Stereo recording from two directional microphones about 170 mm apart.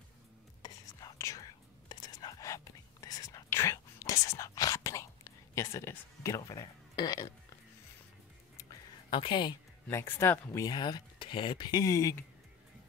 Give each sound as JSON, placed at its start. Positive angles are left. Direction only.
{"t": 0.6, "sound": "whispering", "side_deg": 20}
{"t": 8.5, "sound": "a sound", "side_deg": 25}
{"t": 9.8, "sound": "speech", "side_deg": 15}